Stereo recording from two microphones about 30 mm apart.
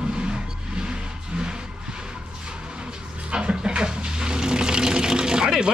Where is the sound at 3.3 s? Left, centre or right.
Right.